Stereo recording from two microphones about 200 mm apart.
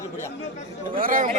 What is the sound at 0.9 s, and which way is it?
Speech, 45° right (ahead or behind).